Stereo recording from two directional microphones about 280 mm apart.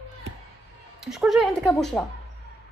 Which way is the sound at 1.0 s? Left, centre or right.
Centre.